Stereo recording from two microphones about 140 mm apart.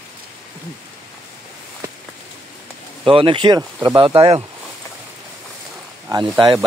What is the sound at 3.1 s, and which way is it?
Speech, 35° right (ahead or behind).